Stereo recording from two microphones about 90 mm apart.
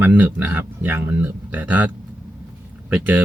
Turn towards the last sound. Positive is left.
turn(degrees=-20)  # may be behind; listen again after turning